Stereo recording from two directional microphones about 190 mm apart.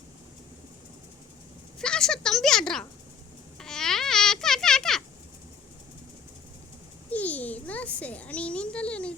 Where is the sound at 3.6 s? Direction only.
5° left (ahead or behind).